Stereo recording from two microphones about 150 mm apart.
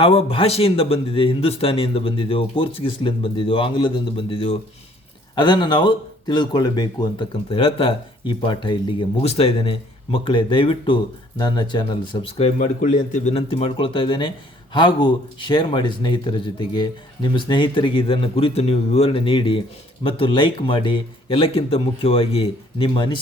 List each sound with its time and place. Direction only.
0.0 s speech: 40° left (ahead or behind)
12.4 s speech: 55° left (ahead or behind)
13.3 s speech: 40° left (ahead or behind)